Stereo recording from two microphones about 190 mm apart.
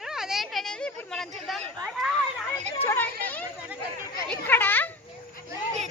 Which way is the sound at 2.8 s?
10° left (ahead or behind).